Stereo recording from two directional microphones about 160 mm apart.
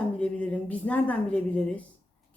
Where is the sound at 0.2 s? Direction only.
10° left (ahead or behind).